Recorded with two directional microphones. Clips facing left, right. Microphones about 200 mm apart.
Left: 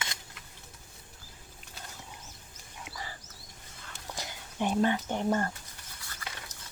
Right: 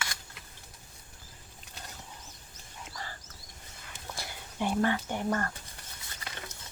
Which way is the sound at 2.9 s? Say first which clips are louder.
Left 1 dB; 10° left (ahead or behind).